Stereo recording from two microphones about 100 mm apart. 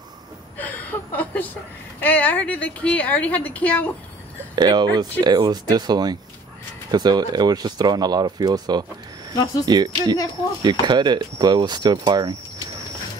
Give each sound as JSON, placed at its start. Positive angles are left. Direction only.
{"t": 0.6, "sound": "chuckle", "side_deg": 15}
{"t": 2.0, "sound": "speech", "side_deg": 15}
{"t": 4.6, "sound": "speech", "side_deg": -45}